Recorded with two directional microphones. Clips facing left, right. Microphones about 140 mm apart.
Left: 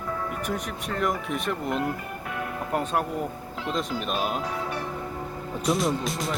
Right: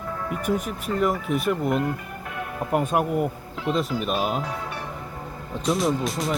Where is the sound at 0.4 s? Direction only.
5° right (ahead or behind).